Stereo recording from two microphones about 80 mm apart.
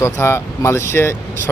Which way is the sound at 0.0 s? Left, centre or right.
Left.